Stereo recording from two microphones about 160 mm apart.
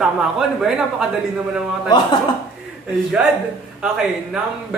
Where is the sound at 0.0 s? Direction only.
5° right (ahead or behind).